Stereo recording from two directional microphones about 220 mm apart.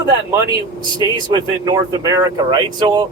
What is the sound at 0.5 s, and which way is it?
Speech, 15° right (ahead or behind).